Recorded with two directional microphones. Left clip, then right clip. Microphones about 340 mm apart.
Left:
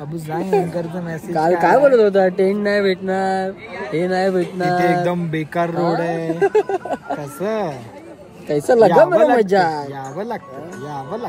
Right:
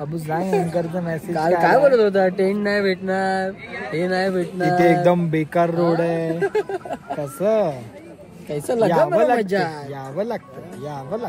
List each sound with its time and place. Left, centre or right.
0.7 s speech: centre
1.6 s speech: centre
4.7 s speech: centre
6.4 s speech: centre
7.2 s speech: centre
8.5 s speech: centre
9.1 s speech: centre
9.4 s speech: centre
10.1 s speech: centre